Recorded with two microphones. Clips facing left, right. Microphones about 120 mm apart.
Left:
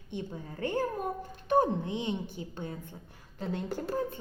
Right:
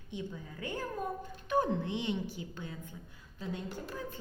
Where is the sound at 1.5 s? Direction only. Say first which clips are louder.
Left 4 dB; 25° left (ahead or behind).